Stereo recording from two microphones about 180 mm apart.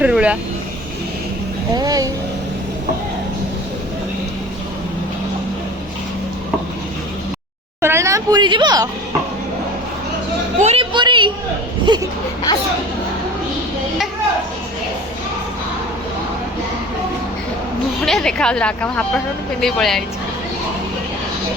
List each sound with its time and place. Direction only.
0.0 s speech: 5° right (ahead or behind)
1.7 s speech: 20° right (ahead or behind)
7.8 s a woman's voice: 15° right (ahead or behind)
10.6 s a sound: 35° right (ahead or behind)
11.9 s speech: 25° right (ahead or behind)
18.0 s speech: 5° left (ahead or behind)